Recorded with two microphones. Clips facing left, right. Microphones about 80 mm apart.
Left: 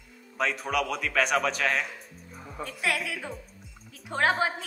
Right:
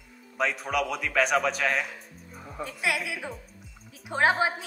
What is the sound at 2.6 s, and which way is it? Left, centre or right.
A woman's voice, centre.